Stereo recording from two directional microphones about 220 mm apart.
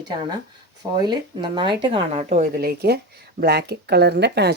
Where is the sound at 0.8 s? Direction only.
20° right (ahead or behind).